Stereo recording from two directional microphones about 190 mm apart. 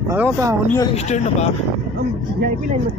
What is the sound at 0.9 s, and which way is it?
Speech, 35° left (ahead or behind).